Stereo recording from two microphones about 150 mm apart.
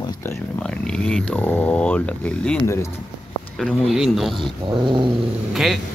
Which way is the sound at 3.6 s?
Centre (ahead or behind).